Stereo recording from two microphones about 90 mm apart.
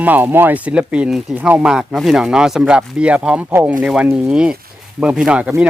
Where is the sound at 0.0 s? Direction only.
20° right (ahead or behind).